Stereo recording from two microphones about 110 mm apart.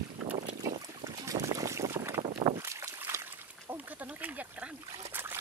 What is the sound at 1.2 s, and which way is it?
Boat, 30° right (ahead or behind).